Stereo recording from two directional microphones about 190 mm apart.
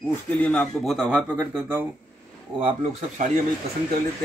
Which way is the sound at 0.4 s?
5° left (ahead or behind).